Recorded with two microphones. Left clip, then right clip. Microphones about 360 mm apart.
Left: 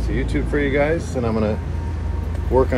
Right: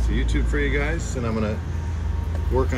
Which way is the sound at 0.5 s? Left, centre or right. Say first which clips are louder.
Left 7 dB; centre.